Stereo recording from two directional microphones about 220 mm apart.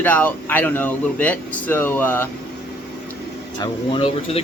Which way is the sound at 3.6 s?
25° left (ahead or behind).